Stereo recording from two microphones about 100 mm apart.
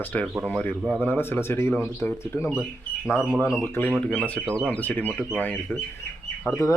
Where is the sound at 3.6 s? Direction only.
20° left (ahead or behind).